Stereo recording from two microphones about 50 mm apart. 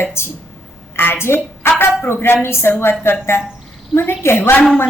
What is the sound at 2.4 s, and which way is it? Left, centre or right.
A woman's voice, left.